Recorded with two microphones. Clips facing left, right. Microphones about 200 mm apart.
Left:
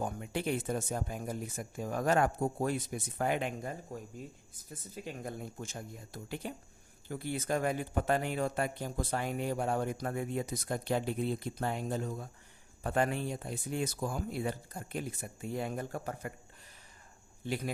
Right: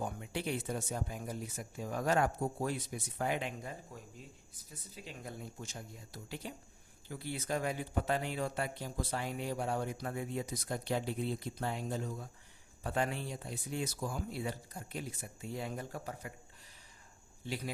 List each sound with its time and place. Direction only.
0.0 s speech: 50° left (ahead or behind)
17.4 s speech: 50° left (ahead or behind)